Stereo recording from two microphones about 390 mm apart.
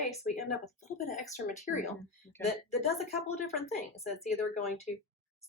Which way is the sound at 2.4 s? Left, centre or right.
Centre.